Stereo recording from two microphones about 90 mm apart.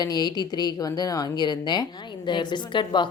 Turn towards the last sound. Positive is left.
turn(degrees=60)  # may be behind; listen again after turning